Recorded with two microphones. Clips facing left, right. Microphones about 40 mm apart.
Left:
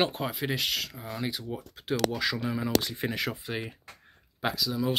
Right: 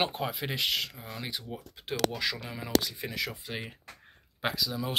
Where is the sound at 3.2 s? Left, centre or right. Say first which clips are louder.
Left 3 dB; centre.